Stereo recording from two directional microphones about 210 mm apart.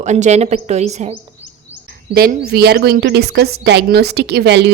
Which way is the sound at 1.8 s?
45° right (ahead or behind).